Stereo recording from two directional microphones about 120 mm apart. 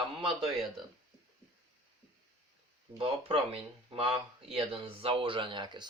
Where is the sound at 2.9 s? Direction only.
50° right (ahead or behind).